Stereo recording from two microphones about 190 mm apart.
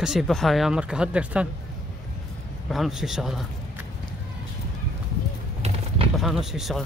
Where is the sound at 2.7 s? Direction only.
Centre (ahead or behind).